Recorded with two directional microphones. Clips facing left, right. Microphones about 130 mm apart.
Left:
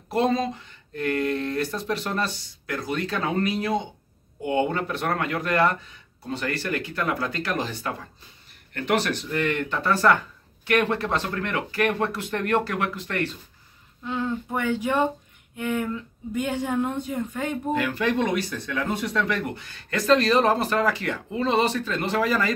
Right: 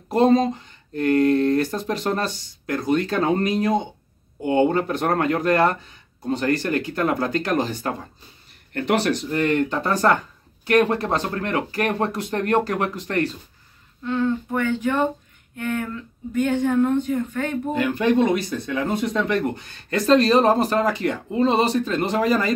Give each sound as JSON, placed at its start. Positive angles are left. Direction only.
{"t": 0.1, "sound": "speech", "side_deg": -40}
{"t": 1.9, "sound": "speech", "side_deg": -40}
{"t": 4.4, "sound": "speech", "side_deg": -35}
{"t": 14.0, "sound": "speech", "side_deg": 10}
{"t": 17.7, "sound": "speech", "side_deg": -20}